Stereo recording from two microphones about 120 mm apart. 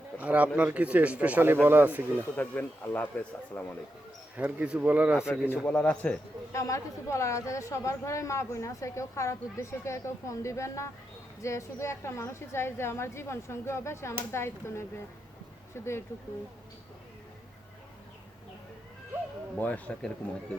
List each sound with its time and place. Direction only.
0.2 s a man's voice: 10° right (ahead or behind)
2.3 s a man's voice: 15° left (ahead or behind)
4.4 s a man's voice: 10° right (ahead or behind)
5.3 s a man's voice: 15° left (ahead or behind)
6.5 s speech: 25° left (ahead or behind)
19.5 s a man's voice: 15° left (ahead or behind)